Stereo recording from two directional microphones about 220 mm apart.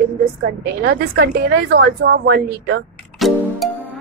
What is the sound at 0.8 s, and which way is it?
A woman's voice, 45° right (ahead or behind).